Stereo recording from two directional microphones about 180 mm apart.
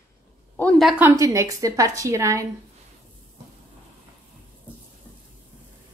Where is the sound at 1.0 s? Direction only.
20° right (ahead or behind).